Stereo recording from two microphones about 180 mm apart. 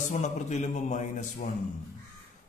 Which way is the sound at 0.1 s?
40° left (ahead or behind).